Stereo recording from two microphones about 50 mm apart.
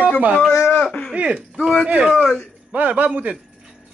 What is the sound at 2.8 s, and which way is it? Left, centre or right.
Speech, right.